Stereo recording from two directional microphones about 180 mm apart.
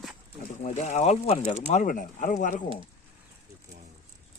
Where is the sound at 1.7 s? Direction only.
50° left (ahead or behind).